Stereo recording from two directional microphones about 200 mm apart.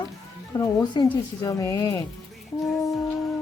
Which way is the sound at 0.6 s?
15° left (ahead or behind).